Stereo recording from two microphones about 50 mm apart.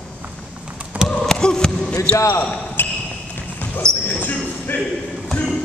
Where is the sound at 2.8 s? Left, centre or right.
Left.